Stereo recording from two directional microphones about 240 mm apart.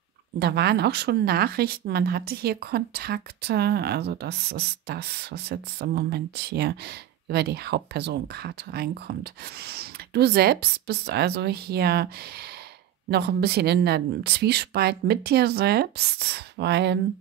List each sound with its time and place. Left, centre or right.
0.4 s speech: right
13.1 s speech: right